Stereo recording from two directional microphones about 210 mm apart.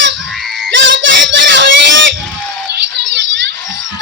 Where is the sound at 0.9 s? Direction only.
60° right (ahead or behind).